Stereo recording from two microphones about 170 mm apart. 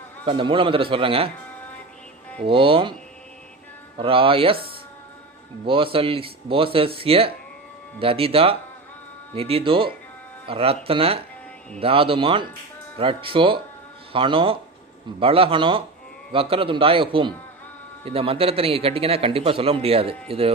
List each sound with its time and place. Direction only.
0.3 s a man's voice: 30° right (ahead or behind)
2.4 s a man's voice: 30° right (ahead or behind)
3.9 s a man's voice: 30° right (ahead or behind)
5.6 s a man's voice: 30° right (ahead or behind)